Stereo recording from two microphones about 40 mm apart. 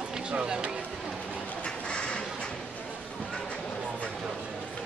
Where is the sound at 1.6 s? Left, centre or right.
Left.